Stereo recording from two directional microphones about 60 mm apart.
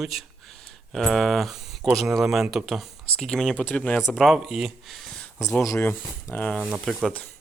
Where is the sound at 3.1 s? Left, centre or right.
Centre.